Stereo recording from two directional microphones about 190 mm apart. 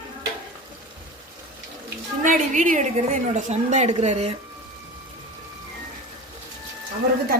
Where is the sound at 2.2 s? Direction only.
40° right (ahead or behind).